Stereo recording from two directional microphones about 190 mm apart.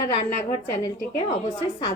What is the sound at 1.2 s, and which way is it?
Speech, 25° left (ahead or behind).